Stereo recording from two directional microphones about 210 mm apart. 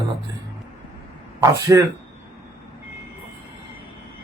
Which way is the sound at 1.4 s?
15° right (ahead or behind).